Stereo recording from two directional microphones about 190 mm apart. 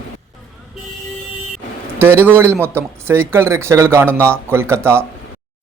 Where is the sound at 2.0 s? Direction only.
10° right (ahead or behind).